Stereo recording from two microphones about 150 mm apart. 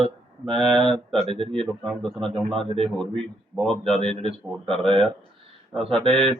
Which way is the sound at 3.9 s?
35° right (ahead or behind).